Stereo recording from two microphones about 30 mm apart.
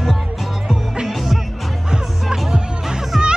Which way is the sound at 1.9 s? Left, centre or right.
Centre.